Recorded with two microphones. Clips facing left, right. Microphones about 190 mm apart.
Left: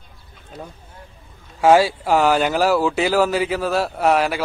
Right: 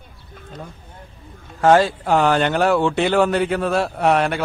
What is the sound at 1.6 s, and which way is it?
Speech, 10° left (ahead or behind).